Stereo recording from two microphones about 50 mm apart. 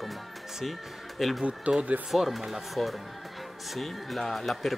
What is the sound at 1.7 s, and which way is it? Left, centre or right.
Speech, right.